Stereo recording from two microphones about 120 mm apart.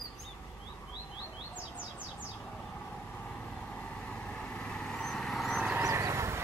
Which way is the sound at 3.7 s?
10° left (ahead or behind).